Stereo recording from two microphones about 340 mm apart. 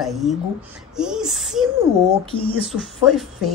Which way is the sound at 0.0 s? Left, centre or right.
Centre.